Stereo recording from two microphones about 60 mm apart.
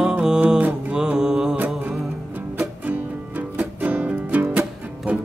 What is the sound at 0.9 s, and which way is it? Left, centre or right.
Mantra, centre.